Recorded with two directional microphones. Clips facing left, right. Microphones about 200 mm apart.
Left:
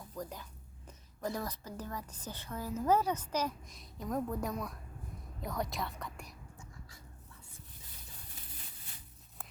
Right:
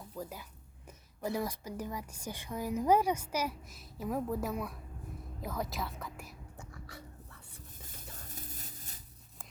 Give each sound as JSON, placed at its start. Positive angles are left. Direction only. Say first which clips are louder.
{"t": 0.2, "sound": "a woman's voice", "louder": "even", "side_deg": -5}
{"t": 6.6, "sound": "dog", "louder": "right 6 dB", "side_deg": -65}
{"t": 8.4, "sound": "a sound", "louder": "right 6 dB", "side_deg": -45}